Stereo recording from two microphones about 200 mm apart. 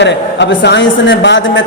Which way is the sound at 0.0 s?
60° left (ahead or behind).